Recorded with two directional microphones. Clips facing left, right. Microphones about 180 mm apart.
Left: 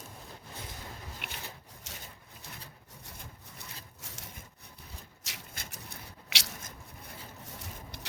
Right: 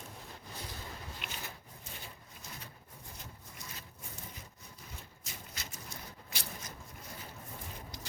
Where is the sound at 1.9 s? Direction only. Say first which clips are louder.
Left 1 dB; 90° left.